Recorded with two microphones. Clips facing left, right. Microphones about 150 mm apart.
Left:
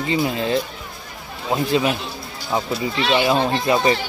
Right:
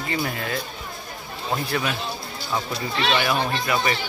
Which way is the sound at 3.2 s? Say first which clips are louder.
Left 5 dB; 25° left (ahead or behind).